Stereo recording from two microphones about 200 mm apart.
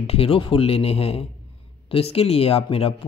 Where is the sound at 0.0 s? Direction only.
30° left (ahead or behind).